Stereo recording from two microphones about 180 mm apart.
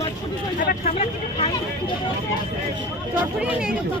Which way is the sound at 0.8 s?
30° left (ahead or behind).